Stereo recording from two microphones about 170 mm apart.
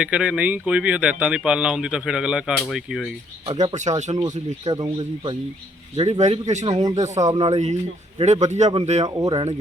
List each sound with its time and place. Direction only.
0.0 s speech: 5° right (ahead or behind)
3.4 s speech: 30° right (ahead or behind)
3.8 s speech: 45° right (ahead or behind)
4.2 s speech: 20° right (ahead or behind)
6.0 s speech: 40° right (ahead or behind)
6.7 s speech: 20° right (ahead or behind)
6.9 s speech: 45° right (ahead or behind)
7.2 s speech: 20° right (ahead or behind)
7.4 s speech: 40° right (ahead or behind)
9.0 s speech: 20° right (ahead or behind)